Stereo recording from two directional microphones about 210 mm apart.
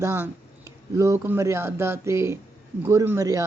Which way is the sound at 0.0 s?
10° right (ahead or behind).